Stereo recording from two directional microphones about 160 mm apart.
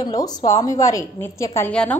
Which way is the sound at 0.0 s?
25° left (ahead or behind).